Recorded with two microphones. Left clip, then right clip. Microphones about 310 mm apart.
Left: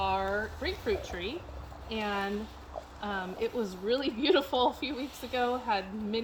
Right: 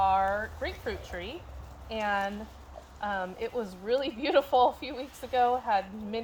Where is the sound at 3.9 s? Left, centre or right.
Centre.